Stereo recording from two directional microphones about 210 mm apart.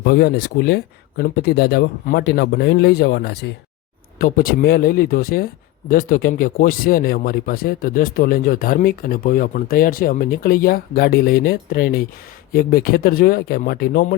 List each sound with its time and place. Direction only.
0.0 s speech: 50° left (ahead or behind)